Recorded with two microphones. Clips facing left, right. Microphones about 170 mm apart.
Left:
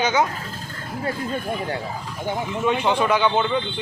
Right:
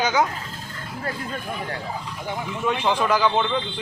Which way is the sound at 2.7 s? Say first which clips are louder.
Left 1 dB; centre (ahead or behind).